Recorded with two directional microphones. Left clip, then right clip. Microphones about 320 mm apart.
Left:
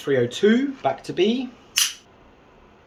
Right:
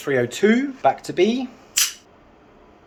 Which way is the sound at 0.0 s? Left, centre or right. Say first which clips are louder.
Even; centre.